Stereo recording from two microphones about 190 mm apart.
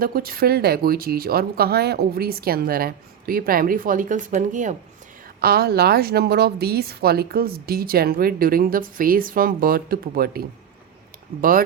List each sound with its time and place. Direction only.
0.0 s a woman's voice: 50° right (ahead or behind)
5.4 s a woman's voice: 55° right (ahead or behind)